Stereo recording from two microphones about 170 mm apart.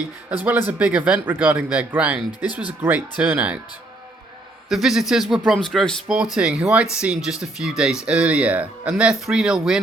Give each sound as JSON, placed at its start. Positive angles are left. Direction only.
{"t": 0.3, "sound": "speech", "side_deg": -10}
{"t": 4.7, "sound": "speech", "side_deg": 0}